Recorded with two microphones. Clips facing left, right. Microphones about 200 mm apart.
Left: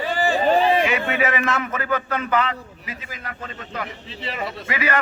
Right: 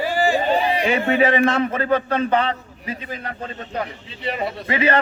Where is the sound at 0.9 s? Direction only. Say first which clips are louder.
Right 5 dB; 30° right (ahead or behind).